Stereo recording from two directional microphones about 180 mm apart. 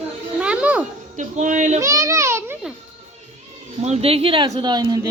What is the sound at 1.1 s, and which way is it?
Speech, 45° right (ahead or behind).